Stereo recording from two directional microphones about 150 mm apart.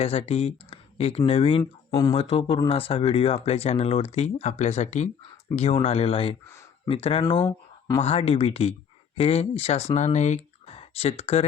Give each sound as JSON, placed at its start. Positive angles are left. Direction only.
{"t": 0.0, "sound": "speech", "side_deg": 45}
{"t": 1.9, "sound": "speech", "side_deg": 25}
{"t": 2.1, "sound": "speech", "side_deg": 40}
{"t": 8.0, "sound": "speech", "side_deg": 40}